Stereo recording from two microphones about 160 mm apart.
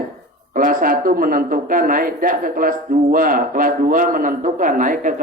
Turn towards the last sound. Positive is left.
turn(degrees=-55)  # may be behind; listen again after turning